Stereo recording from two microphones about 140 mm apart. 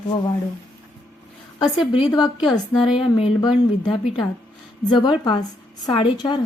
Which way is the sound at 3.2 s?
35° left (ahead or behind).